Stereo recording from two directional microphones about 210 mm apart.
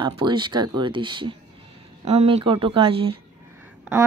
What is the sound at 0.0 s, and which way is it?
Speech, 20° right (ahead or behind).